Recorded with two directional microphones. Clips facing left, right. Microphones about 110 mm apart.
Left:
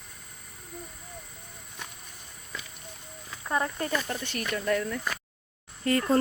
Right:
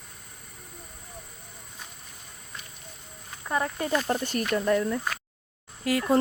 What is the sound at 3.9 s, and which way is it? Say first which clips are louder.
Speech: right 5 dB; 35° right (ahead or behind).